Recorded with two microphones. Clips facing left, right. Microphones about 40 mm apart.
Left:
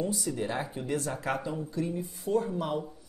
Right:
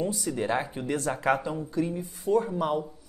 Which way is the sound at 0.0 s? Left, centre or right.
Right.